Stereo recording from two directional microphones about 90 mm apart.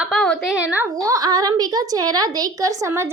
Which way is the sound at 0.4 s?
15° right (ahead or behind).